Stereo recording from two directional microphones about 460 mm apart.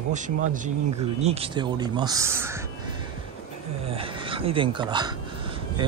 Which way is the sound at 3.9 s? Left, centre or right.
Centre.